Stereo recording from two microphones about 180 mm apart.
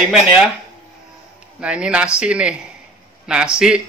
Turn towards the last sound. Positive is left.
turn(degrees=-5)  # may be behind; listen again after turning